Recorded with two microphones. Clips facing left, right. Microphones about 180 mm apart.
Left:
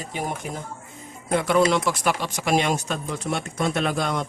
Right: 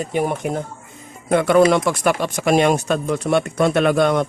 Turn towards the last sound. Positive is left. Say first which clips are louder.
# right 9 dB
turn(degrees=-65)  # may be behind; listen again after turning